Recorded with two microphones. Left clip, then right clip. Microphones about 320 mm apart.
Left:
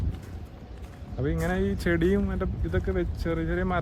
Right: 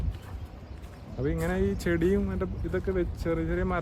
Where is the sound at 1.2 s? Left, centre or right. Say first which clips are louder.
Left 1 dB; centre.